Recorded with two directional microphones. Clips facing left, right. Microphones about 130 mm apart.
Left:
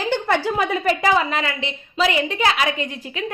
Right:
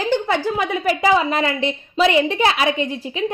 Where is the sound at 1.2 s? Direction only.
40° right (ahead or behind).